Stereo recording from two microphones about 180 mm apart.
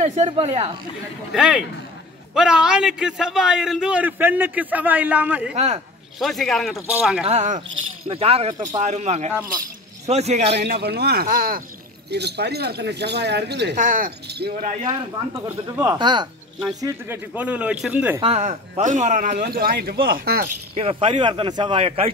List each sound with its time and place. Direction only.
0.0 s speech: 40° right (ahead or behind)
1.3 s a man's voice: 5° right (ahead or behind)
7.2 s speech: 40° right (ahead or behind)
8.8 s speech: 40° right (ahead or behind)
10.5 s speech: 65° right (ahead or behind)
12.1 s speech: 65° right (ahead or behind)
13.7 s a man's voice: 50° right (ahead or behind)
14.9 s speech: 15° right (ahead or behind)
16.8 s a man's voice: 10° right (ahead or behind)
18.2 s a man's voice: 40° right (ahead or behind); by 20.4 s 55° right (ahead or behind)
20.7 s speech: 30° right (ahead or behind)